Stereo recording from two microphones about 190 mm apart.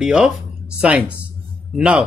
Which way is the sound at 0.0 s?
5° right (ahead or behind).